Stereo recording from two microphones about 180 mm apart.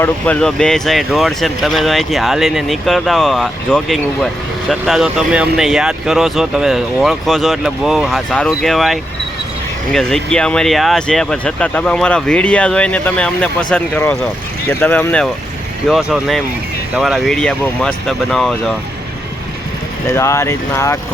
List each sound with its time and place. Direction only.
0.0 s speech: 5° left (ahead or behind)
15.9 s speech: 5° right (ahead or behind)
20.1 s speech: 15° left (ahead or behind)